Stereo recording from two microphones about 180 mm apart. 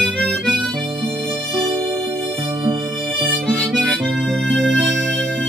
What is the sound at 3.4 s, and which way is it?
Harmonica, 5° left (ahead or behind).